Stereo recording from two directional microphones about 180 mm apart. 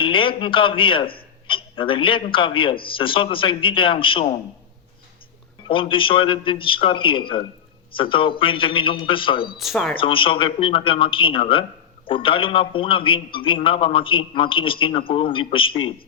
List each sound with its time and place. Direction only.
0.0 s a man's voice: 30° left (ahead or behind)
5.6 s a man's voice: 30° left (ahead or behind)
9.6 s speech: centre (ahead or behind)
10.0 s a man's voice: 30° left (ahead or behind)